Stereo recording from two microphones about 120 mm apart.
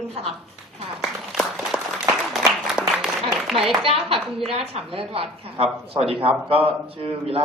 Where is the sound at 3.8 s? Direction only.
50° right (ahead or behind).